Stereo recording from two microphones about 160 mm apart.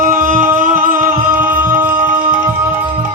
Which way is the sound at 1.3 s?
10° right (ahead or behind).